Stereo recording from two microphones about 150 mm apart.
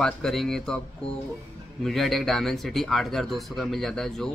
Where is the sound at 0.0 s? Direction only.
5° left (ahead or behind).